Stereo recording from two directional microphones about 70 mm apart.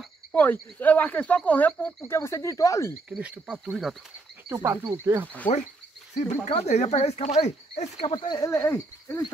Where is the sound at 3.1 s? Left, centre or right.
Centre.